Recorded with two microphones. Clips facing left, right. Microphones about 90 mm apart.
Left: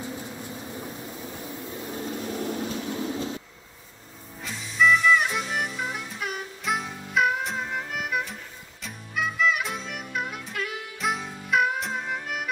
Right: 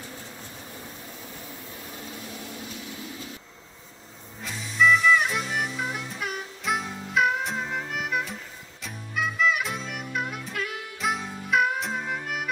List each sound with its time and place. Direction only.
0.0 s vehicle: 15° left (ahead or behind)
2.0 s vehicle: 40° left (ahead or behind)
4.4 s music: centre (ahead or behind)